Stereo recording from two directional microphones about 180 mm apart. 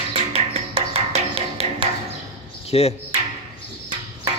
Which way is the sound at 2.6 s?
35° left (ahead or behind).